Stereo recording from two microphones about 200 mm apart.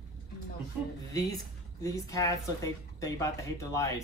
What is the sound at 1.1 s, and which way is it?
Speech, 15° left (ahead or behind).